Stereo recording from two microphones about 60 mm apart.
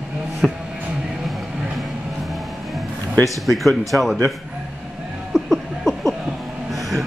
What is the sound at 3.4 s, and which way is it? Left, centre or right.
Speech, centre.